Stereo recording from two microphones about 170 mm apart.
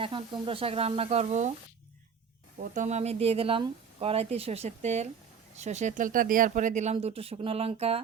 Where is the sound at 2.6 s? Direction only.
45° right (ahead or behind).